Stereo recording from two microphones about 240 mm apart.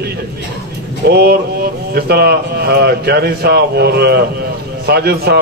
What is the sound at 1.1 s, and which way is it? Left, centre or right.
Speech, right.